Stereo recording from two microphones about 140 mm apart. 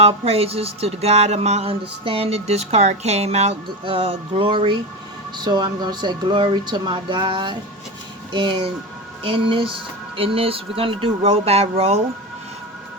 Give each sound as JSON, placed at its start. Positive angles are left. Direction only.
{"t": 0.0, "sound": "speech", "side_deg": -45}